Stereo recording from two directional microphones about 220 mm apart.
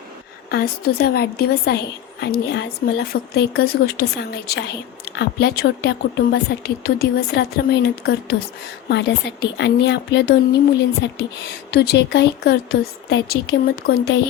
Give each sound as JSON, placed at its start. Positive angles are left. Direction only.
{"t": 0.5, "sound": "a woman's voice", "side_deg": 45}